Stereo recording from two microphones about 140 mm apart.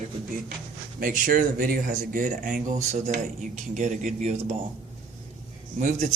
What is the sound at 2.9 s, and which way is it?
Speech, 60° right (ahead or behind).